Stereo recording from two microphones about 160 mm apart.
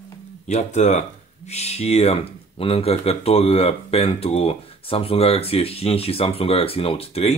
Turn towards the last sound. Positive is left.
turn(degrees=40)  # may be behind; listen again after turning